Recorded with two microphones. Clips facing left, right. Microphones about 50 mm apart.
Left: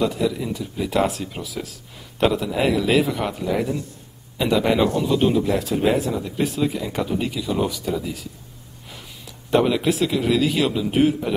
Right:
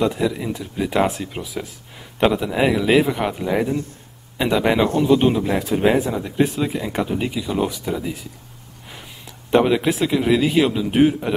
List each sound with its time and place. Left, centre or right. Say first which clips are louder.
0.0 s speech: right 1 dB; right
4.8 s a man's voice: right 3 dB; right
5.1 s speech: right 2 dB; right
9.5 s speech: right 2 dB; centre